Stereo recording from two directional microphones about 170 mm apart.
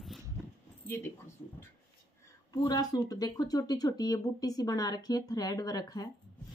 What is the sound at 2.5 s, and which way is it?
Speech, 20° left (ahead or behind).